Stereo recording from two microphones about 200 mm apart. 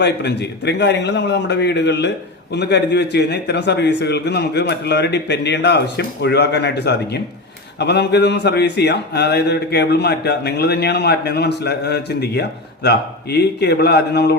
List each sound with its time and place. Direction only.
0.0 s a man's voice: 60° left (ahead or behind)